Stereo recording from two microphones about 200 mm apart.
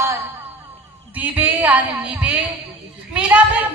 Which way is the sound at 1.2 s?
10° right (ahead or behind).